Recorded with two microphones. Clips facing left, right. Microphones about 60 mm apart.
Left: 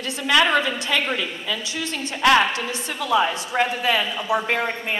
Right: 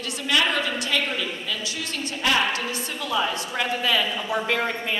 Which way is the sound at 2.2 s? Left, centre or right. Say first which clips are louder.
Left 7 dB; left.